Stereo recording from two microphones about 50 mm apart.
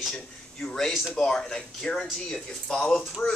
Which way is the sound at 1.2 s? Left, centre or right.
Centre.